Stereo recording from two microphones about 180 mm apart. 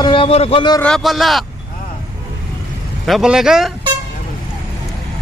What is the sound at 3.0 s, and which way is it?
Speech, centre (ahead or behind).